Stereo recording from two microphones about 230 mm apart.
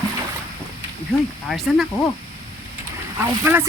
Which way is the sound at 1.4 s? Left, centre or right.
Centre.